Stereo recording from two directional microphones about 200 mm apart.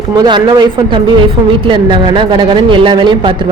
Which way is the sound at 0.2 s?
20° right (ahead or behind).